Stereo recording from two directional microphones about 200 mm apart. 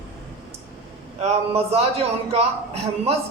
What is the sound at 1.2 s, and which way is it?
A man's voice, 30° right (ahead or behind).